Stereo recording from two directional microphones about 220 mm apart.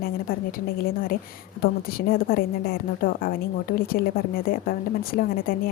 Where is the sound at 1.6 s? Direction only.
40° left (ahead or behind).